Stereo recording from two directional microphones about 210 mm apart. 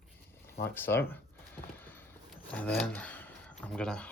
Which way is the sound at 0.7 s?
10° left (ahead or behind).